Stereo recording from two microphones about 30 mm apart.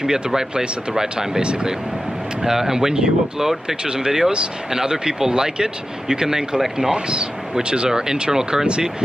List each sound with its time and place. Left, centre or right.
0.0 s speech: right
2.4 s speech: centre
8.6 s speech: right